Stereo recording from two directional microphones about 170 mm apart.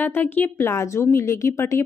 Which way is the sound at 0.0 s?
10° left (ahead or behind).